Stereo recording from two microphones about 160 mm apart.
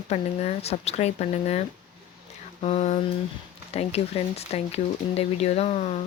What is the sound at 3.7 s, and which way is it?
Speech, 40° left (ahead or behind).